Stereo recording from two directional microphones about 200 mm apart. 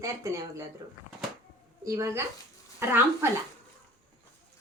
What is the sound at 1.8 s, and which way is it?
A woman's voice, 15° right (ahead or behind).